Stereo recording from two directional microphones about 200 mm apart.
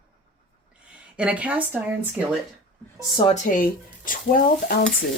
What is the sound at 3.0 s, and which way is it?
Speech, 20° left (ahead or behind).